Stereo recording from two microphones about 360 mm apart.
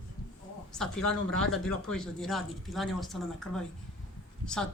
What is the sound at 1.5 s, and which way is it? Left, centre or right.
A woman's voice, centre.